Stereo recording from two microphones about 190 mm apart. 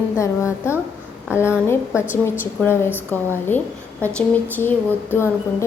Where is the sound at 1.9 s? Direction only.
10° right (ahead or behind).